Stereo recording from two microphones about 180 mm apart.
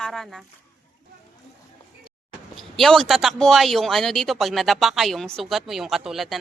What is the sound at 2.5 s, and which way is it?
Speech, centre (ahead or behind).